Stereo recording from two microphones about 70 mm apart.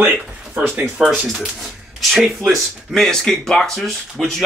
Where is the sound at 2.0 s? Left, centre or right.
Centre.